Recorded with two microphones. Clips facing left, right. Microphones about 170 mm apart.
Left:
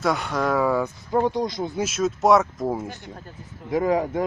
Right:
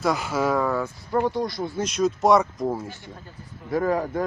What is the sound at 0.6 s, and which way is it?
Speech, 15° left (ahead or behind).